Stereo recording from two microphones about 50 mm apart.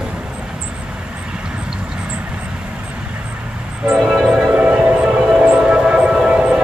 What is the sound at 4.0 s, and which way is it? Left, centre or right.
Train, centre.